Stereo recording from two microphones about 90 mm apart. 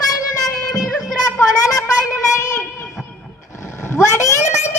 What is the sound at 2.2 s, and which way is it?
Child singing, 35° left (ahead or behind).